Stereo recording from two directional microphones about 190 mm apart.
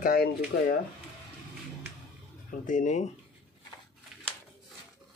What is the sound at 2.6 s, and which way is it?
Speech, 40° left (ahead or behind).